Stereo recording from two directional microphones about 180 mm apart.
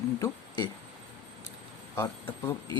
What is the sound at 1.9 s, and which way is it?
Speech, 10° left (ahead or behind).